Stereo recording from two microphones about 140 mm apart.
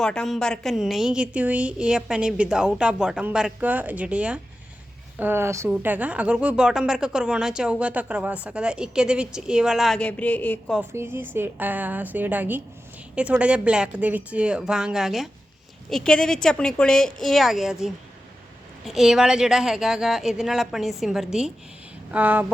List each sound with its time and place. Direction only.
0.0 s a woman's voice: 5° left (ahead or behind)
10.9 s a woman's voice: 15° right (ahead or behind); by 21.2 s centre (ahead or behind)
22.1 s a woman's voice: 15° right (ahead or behind)